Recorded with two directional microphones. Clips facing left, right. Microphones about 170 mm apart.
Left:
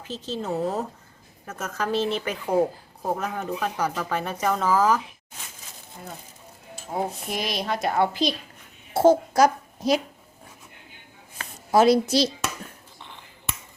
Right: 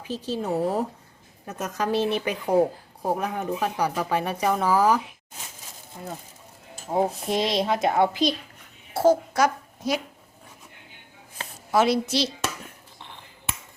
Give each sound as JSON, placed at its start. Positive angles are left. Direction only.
{"t": 0.0, "sound": "a woman's voice", "side_deg": -10}
{"t": 6.9, "sound": "speech", "side_deg": -25}
{"t": 8.9, "sound": "a child's voice", "side_deg": 25}
{"t": 9.3, "sound": "a woman's voice", "side_deg": 35}
{"t": 11.7, "sound": "speech", "side_deg": 40}